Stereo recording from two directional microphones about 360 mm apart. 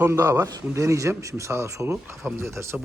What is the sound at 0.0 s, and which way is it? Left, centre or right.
A man's voice, centre.